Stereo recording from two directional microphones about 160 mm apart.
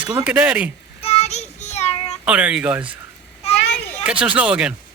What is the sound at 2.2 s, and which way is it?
Speech, 10° right (ahead or behind).